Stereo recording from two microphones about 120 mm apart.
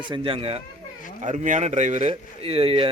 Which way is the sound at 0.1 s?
50° right (ahead or behind).